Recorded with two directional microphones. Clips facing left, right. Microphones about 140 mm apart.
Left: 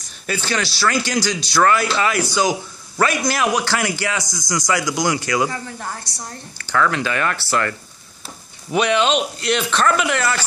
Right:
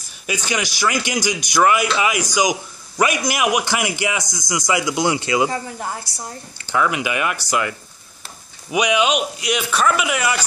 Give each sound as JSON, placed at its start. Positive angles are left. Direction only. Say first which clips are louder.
{"t": 0.0, "sound": "a man's voice", "louder": "left 1 dB", "side_deg": -15}
{"t": 8.7, "sound": "speech", "louder": "left 1 dB", "side_deg": -10}